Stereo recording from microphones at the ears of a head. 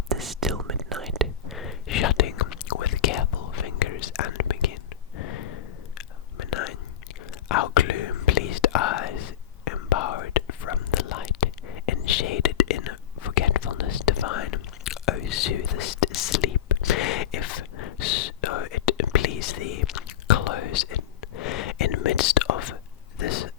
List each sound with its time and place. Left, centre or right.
1.5 s whispering: left